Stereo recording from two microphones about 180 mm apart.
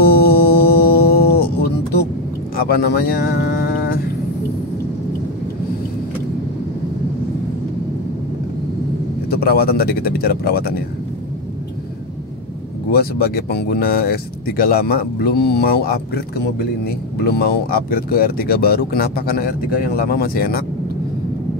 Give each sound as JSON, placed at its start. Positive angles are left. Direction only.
{"t": 0.0, "sound": "music", "side_deg": 60}
{"t": 2.5, "sound": "speech", "side_deg": 60}
{"t": 9.3, "sound": "speech", "side_deg": 55}
{"t": 12.9, "sound": "speech", "side_deg": 60}